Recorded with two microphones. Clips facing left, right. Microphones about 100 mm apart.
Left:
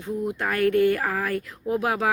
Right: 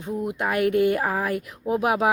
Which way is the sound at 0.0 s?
20° right (ahead or behind).